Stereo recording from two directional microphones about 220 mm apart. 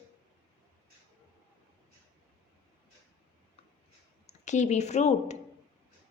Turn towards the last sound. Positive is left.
turn(degrees=30)  # may be behind; listen again after turning